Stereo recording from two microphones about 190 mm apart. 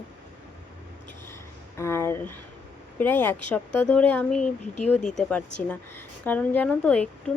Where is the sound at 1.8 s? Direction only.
15° left (ahead or behind).